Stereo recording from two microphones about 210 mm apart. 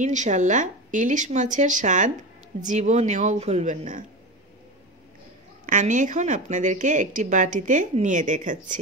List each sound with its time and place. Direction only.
0.0 s speech: 35° right (ahead or behind)
5.7 s speech: 35° right (ahead or behind)